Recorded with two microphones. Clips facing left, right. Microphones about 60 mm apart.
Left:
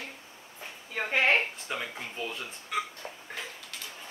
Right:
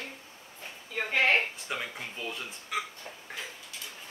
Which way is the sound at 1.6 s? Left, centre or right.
Centre.